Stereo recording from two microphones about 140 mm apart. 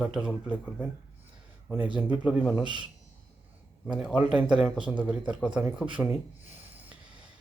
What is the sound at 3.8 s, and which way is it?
Speech, 5° right (ahead or behind).